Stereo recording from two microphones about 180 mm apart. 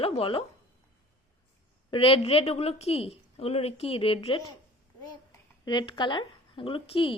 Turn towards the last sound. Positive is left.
turn(degrees=30)  # may be behind; listen again after turning